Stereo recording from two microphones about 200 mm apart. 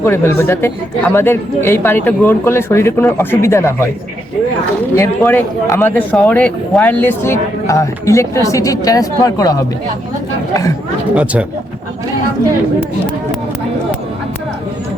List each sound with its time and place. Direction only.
0.0 s speech: 10° left (ahead or behind)
4.9 s speech: 15° left (ahead or behind)
11.1 s speech: 5° right (ahead or behind)